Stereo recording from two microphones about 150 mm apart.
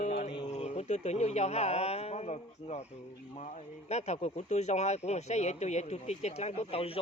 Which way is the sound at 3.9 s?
45° left (ahead or behind).